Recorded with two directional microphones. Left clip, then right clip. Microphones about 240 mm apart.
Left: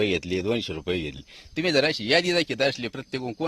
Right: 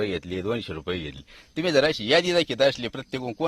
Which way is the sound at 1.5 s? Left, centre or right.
Centre.